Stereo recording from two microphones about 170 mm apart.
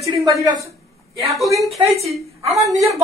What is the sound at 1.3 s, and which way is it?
Speech, centre (ahead or behind).